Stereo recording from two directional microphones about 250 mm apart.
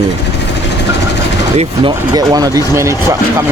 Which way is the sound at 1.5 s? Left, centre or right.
Centre.